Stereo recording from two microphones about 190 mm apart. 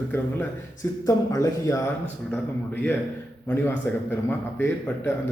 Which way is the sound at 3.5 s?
10° left (ahead or behind).